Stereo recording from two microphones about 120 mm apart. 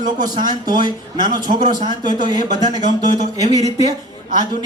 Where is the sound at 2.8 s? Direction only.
90° left.